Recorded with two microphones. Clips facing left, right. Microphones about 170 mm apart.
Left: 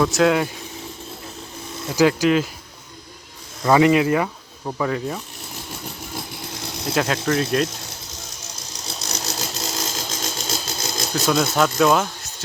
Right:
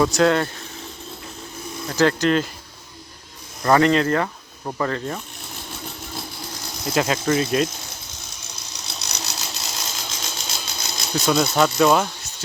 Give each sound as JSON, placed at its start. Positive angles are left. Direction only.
{"t": 0.0, "sound": "speech", "side_deg": 0}
{"t": 1.9, "sound": "speech", "side_deg": 10}
{"t": 3.6, "sound": "speech", "side_deg": 10}
{"t": 6.8, "sound": "speech", "side_deg": 0}
{"t": 8.5, "sound": "ratchet", "side_deg": 45}
{"t": 11.1, "sound": "speech", "side_deg": 0}